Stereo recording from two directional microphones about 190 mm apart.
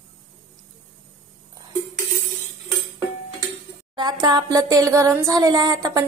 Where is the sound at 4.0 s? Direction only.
20° right (ahead or behind).